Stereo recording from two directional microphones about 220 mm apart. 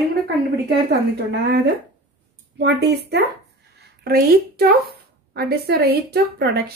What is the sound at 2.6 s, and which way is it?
A woman's voice, 50° right (ahead or behind).